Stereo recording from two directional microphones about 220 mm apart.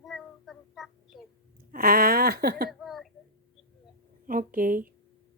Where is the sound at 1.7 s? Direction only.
40° right (ahead or behind).